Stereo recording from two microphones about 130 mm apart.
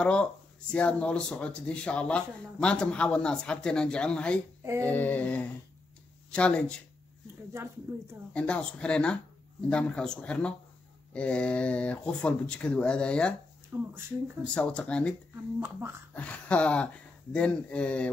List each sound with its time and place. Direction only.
0.0 s speech: 10° left (ahead or behind)
7.9 s speech: 20° right (ahead or behind)
8.3 s speech: 10° left (ahead or behind)
13.7 s speech: 15° right (ahead or behind)
14.4 s speech: 10° left (ahead or behind)
16.2 s speech: 10° left (ahead or behind)